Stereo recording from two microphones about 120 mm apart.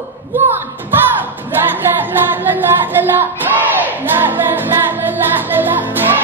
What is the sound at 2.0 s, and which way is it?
Music, 15° right (ahead or behind).